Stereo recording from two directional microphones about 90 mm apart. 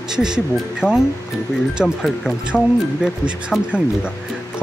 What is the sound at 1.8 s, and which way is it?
Speech, 5° right (ahead or behind).